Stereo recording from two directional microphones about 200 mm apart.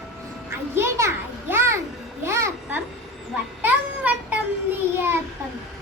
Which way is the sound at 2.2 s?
15° right (ahead or behind).